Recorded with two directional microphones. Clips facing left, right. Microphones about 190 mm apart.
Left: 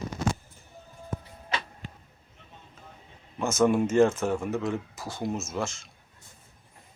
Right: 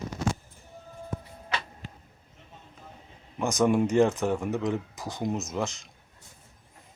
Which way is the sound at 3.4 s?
15° right (ahead or behind).